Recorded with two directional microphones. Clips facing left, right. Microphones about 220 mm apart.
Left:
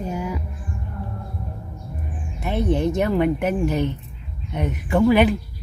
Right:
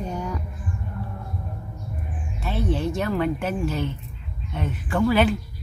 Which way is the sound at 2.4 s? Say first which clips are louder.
Left 4 dB; 20° left (ahead or behind).